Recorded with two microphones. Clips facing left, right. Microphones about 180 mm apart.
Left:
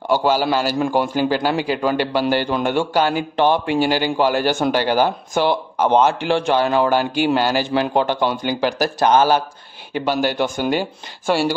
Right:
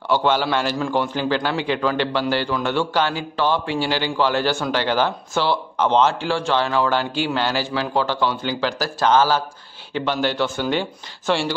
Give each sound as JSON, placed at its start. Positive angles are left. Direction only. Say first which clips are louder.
{"t": 0.1, "sound": "speech", "louder": "left 2 dB", "side_deg": 10}
{"t": 3.0, "sound": "a man's voice", "louder": "left 4 dB", "side_deg": 45}
{"t": 3.3, "sound": "speech", "louder": "left 4 dB", "side_deg": 15}
{"t": 3.8, "sound": "a man's voice", "louder": "left 4 dB", "side_deg": 45}
{"t": 4.2, "sound": "speech", "louder": "left 2 dB", "side_deg": 15}